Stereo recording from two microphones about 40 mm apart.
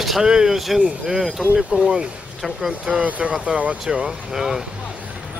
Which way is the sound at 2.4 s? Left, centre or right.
Centre.